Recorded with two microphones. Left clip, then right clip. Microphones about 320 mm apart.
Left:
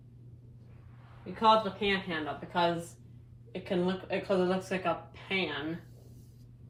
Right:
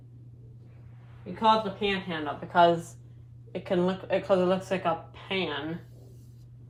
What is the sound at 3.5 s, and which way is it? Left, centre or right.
Speech, centre.